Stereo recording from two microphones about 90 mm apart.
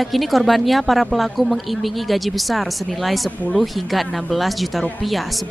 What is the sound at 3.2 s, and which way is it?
Speech, 15° left (ahead or behind).